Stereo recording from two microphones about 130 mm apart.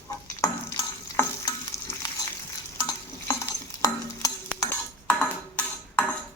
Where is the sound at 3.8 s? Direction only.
25° left (ahead or behind).